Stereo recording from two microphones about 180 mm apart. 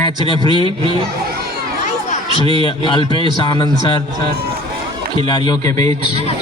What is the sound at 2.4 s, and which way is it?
A man's voice, 25° left (ahead or behind).